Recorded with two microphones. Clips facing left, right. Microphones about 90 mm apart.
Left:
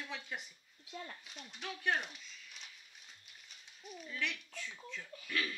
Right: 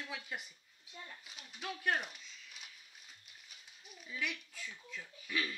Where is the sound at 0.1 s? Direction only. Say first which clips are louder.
Even; 5° right (ahead or behind).